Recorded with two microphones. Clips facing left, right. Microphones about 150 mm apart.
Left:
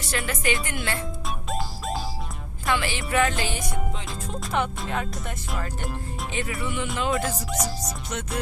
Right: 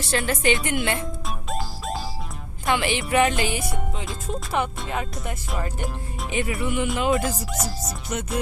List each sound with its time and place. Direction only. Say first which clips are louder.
0.0 s speech: right 5 dB; 30° right (ahead or behind)
1.5 s music: even; centre (ahead or behind)
2.6 s speech: right 3 dB; 20° right (ahead or behind)
4.3 s speech: right 1 dB; 5° right (ahead or behind)
6.3 s speech: right 5 dB; 15° right (ahead or behind)
7.1 s speech: right 3 dB; centre (ahead or behind)